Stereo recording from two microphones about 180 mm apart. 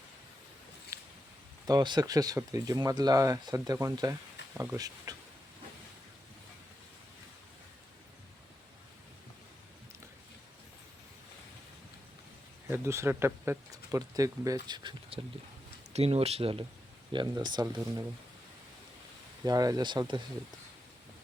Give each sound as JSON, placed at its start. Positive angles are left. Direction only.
{"t": 0.9, "sound": "a sound", "side_deg": -15}
{"t": 1.6, "sound": "speech", "side_deg": -25}
{"t": 12.7, "sound": "speech", "side_deg": -15}
{"t": 15.9, "sound": "speech", "side_deg": -35}
{"t": 19.5, "sound": "speech", "side_deg": -20}